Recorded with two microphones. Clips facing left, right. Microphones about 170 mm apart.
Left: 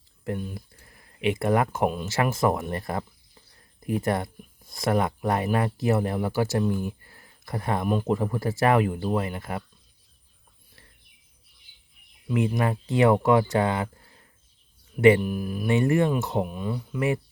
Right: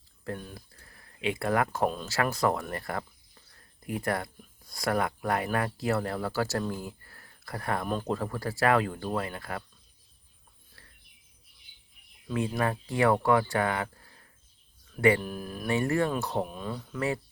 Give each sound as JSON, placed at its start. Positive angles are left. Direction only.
{"t": 0.5, "sound": "speech", "side_deg": 20}
{"t": 12.3, "sound": "speech", "side_deg": 20}
{"t": 15.2, "sound": "speech", "side_deg": 10}